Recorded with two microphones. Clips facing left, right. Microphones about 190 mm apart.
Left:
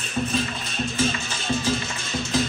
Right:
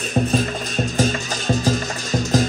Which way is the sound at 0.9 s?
40° right (ahead or behind).